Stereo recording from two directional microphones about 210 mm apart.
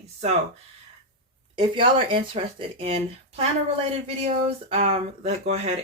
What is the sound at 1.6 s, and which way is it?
Speech, 25° right (ahead or behind).